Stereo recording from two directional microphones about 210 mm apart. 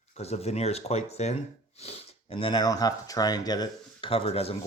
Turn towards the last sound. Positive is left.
turn(degrees=30)  # may be behind; listen again after turning